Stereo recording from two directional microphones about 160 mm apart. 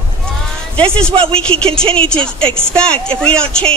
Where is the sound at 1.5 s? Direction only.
40° right (ahead or behind).